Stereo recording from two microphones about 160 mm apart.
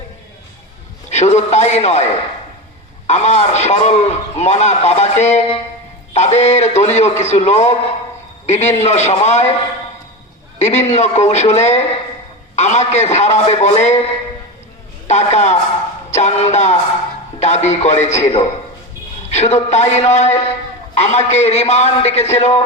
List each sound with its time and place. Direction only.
1.1 s a man's voice: 45° left (ahead or behind)
3.1 s a man's voice: 45° left (ahead or behind)
10.6 s a man's voice: 45° left (ahead or behind)
15.0 s a man's voice: 45° left (ahead or behind)